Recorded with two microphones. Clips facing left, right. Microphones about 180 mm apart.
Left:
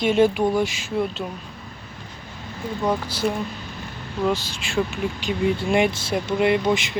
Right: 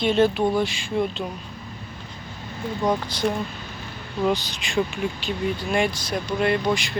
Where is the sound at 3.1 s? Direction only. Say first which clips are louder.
Even; 5° left (ahead or behind).